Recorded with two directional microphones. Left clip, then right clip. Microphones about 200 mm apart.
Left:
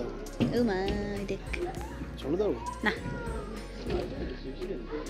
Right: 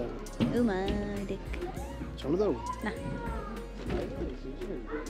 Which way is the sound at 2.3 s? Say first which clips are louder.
Even; 65° right (ahead or behind).